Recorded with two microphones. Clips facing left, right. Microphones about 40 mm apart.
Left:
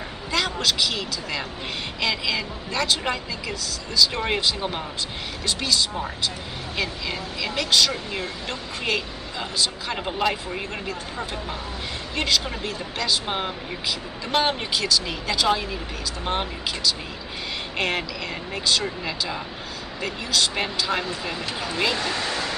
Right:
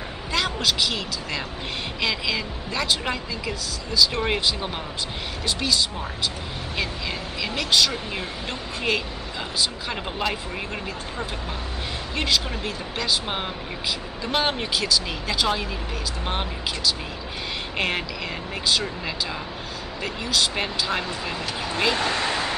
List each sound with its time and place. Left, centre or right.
0.3 s speech: centre
12.6 s speech: centre
21.9 s speech: right